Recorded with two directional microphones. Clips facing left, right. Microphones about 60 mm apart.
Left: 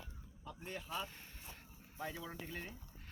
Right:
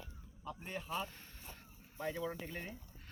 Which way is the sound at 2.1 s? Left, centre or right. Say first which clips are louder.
Right 7 dB; right.